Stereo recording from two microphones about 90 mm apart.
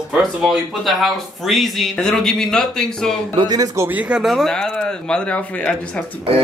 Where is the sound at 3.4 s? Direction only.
50° right (ahead or behind).